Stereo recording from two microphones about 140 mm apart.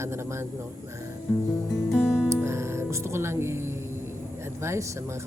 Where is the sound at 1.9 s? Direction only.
5° right (ahead or behind).